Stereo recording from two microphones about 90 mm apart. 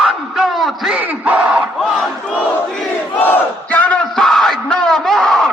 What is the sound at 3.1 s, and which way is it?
Crowd, 20° left (ahead or behind).